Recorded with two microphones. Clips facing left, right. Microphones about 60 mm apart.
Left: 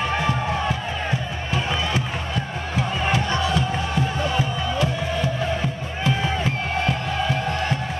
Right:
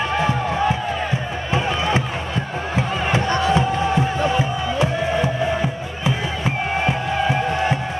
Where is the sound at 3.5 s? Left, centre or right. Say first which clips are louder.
Right 5 dB; right.